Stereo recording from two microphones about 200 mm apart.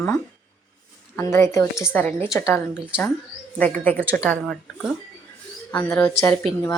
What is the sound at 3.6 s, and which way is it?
Speech, 5° left (ahead or behind).